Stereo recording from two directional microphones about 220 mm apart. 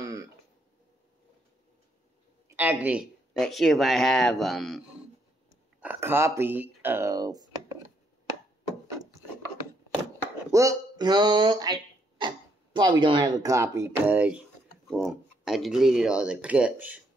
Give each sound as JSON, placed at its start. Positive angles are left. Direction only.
{"t": 0.0, "sound": "throat clearing", "side_deg": -15}
{"t": 2.4, "sound": "speech", "side_deg": -10}
{"t": 10.5, "sound": "speech", "side_deg": -15}